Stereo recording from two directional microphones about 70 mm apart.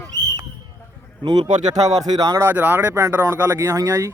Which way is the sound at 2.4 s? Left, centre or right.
Right.